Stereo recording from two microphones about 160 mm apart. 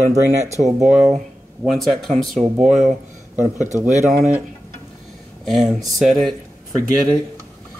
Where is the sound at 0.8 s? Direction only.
5° right (ahead or behind).